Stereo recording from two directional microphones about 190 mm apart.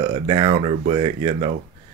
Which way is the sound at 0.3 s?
30° right (ahead or behind).